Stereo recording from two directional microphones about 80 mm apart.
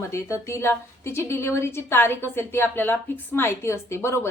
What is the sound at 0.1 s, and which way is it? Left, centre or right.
A woman's voice, left.